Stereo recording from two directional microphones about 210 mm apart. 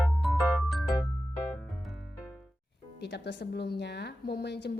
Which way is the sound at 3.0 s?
55° left (ahead or behind).